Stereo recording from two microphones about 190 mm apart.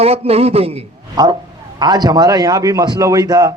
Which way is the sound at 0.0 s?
30° right (ahead or behind).